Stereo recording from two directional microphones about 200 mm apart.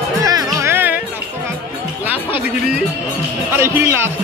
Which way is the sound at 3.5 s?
15° right (ahead or behind).